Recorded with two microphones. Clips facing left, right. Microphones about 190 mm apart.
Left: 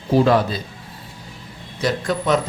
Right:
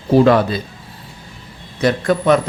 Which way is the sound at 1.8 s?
55° right (ahead or behind).